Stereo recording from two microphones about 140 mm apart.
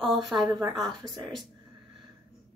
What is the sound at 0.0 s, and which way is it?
Speech, centre (ahead or behind).